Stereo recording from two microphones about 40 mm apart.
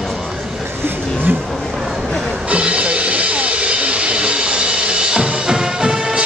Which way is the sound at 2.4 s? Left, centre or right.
Right.